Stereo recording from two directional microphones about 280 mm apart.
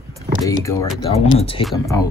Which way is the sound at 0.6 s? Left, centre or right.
Centre.